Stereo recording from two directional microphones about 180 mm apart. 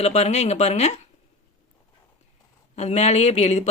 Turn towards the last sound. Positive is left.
turn(degrees=40)  # may be behind; listen again after turning